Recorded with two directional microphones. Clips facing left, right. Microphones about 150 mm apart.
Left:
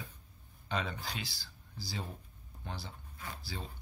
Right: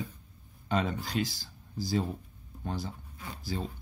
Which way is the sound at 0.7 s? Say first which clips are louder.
Right 7 dB; 45° right (ahead or behind).